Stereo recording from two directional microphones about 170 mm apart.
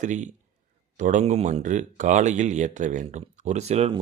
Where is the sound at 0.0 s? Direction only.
45° right (ahead or behind).